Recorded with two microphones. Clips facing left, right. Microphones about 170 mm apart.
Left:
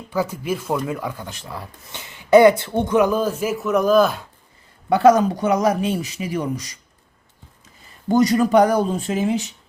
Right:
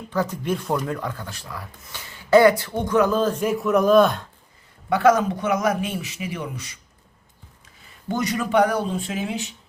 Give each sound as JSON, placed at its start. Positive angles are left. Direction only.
{"t": 0.1, "sound": "speech", "side_deg": 10}
{"t": 4.9, "sound": "speech", "side_deg": 35}
{"t": 8.0, "sound": "speech", "side_deg": 40}